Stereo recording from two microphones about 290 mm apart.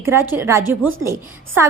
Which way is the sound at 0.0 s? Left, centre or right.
Centre.